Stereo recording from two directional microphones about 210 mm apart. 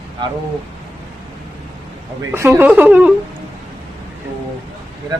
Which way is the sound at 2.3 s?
10° right (ahead or behind).